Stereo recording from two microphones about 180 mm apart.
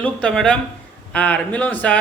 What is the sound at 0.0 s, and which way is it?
A man's voice, 5° left (ahead or behind).